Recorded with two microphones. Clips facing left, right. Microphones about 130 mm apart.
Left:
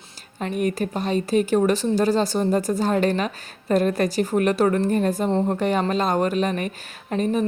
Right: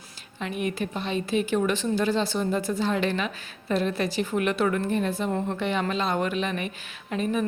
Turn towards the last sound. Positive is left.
turn(degrees=40)  # may be behind; listen again after turning